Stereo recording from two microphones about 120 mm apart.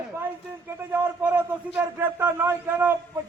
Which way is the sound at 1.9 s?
20° right (ahead or behind).